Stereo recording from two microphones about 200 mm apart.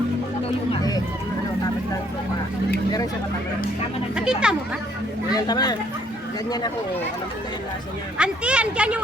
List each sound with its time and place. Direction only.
4.1 s a sound: 5° right (ahead or behind)
5.3 s speech: 20° left (ahead or behind)
8.2 s speech: 5° right (ahead or behind)